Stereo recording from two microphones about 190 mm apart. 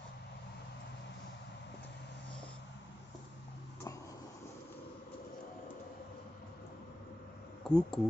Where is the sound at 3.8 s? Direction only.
15° left (ahead or behind).